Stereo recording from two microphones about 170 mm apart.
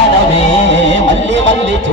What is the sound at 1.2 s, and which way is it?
Music, 90° right.